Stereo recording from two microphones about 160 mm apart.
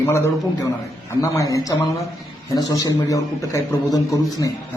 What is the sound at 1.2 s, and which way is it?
A man's voice, 20° left (ahead or behind).